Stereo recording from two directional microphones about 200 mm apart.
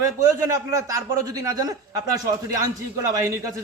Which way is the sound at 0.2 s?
15° right (ahead or behind).